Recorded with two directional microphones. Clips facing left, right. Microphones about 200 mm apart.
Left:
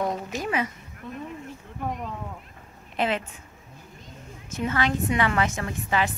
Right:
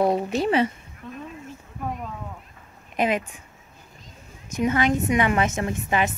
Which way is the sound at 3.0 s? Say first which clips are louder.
Right 3 dB; 15° right (ahead or behind).